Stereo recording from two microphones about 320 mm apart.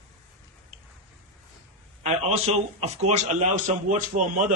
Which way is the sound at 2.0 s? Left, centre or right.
Centre.